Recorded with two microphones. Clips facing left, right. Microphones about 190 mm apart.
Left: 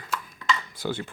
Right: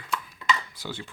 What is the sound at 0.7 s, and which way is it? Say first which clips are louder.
Speech: left 7 dB; 55° left (ahead or behind).